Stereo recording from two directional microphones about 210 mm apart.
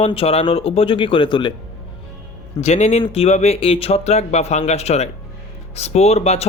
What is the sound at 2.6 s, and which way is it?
Speech, 30° left (ahead or behind).